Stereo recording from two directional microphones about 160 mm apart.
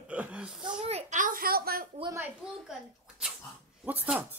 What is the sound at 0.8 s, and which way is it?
A child's voice, 45° right (ahead or behind).